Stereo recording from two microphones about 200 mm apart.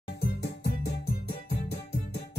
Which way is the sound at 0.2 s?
55° left (ahead or behind).